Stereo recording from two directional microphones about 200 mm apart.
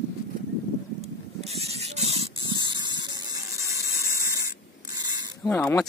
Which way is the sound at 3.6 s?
15° right (ahead or behind).